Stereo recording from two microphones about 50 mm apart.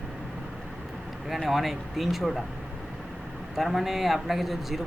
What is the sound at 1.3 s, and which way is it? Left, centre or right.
A man's voice, centre.